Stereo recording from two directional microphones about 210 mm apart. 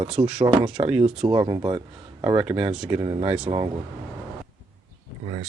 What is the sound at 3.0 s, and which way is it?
Speech, 25° right (ahead or behind).